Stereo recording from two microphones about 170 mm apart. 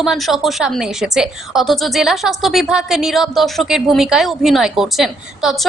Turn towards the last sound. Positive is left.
turn(degrees=0)  # may be behind; listen again after turning